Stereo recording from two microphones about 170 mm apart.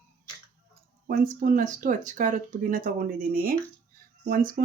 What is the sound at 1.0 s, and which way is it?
Speech, 55° right (ahead or behind).